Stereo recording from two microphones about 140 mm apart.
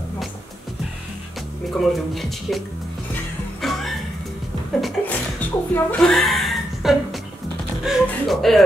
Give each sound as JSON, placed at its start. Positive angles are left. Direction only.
{"t": 1.8, "sound": "speech", "side_deg": 0}
{"t": 3.6, "sound": "music", "side_deg": 0}
{"t": 5.0, "sound": "speech", "side_deg": 10}